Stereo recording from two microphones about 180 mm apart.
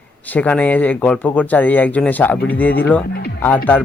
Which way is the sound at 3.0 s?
60° left (ahead or behind).